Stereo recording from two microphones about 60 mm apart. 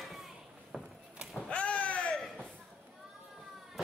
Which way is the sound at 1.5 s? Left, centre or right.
Centre.